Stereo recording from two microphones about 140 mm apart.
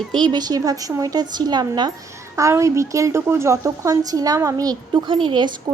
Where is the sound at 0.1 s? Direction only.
35° right (ahead or behind).